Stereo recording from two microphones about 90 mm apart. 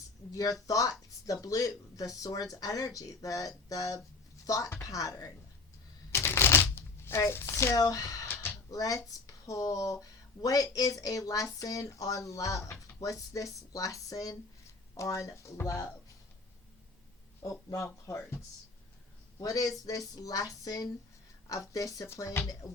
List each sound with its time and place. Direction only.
0.3 s speech: 40° left (ahead or behind)
6.1 s shuffling cards: 30° left (ahead or behind)
8.3 s a sound: 25° left (ahead or behind)
8.7 s a sound: 45° left (ahead or behind)
9.2 s speech: 40° left (ahead or behind)
17.4 s speech: 35° left (ahead or behind)
19.4 s speech: 40° left (ahead or behind)
19.8 s a sound: 45° left (ahead or behind)
21.5 s speech: 40° left (ahead or behind)